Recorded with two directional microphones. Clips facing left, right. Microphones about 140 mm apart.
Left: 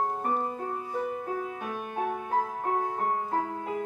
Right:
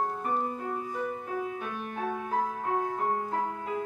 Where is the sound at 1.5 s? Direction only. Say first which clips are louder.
Left 1 dB; 35° left (ahead or behind).